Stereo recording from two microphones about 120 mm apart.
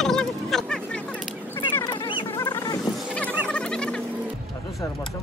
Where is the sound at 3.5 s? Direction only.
10° left (ahead or behind).